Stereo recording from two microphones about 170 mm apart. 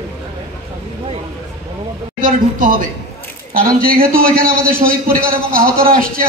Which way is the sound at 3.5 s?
55° right (ahead or behind).